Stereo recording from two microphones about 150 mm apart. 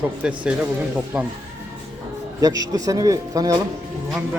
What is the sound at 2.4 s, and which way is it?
A man's voice, 25° right (ahead or behind).